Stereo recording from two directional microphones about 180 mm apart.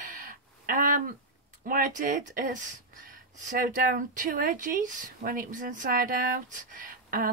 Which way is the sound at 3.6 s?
50° right (ahead or behind).